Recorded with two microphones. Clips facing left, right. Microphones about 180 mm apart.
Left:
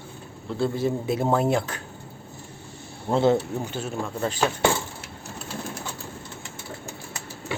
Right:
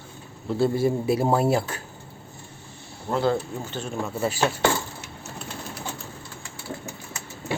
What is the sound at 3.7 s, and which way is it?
Speech, 5° left (ahead or behind).